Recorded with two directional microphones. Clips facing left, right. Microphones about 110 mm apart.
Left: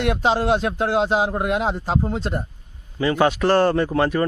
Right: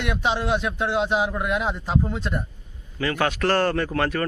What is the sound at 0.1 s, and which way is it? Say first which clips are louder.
Speech: left 3 dB; 35° left (ahead or behind).